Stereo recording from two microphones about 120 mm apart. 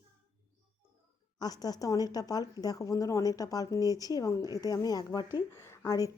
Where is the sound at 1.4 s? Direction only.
35° left (ahead or behind).